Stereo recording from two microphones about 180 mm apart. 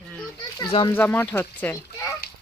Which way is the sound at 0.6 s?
25° left (ahead or behind).